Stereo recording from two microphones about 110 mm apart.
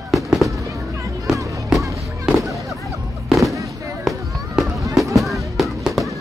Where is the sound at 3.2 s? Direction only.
Centre (ahead or behind).